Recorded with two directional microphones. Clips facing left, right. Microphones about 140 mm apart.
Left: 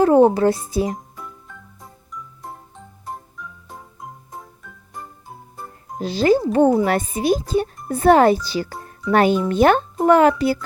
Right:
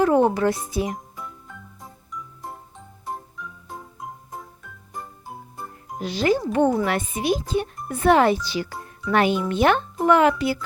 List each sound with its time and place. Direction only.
0.0 s a child's voice: 30° left (ahead or behind)
0.9 s music: centre (ahead or behind)
3.1 s organ: centre (ahead or behind)
6.0 s a child's voice: 35° left (ahead or behind)